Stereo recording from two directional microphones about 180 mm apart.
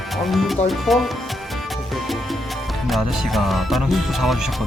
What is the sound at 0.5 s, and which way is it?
Music, centre (ahead or behind).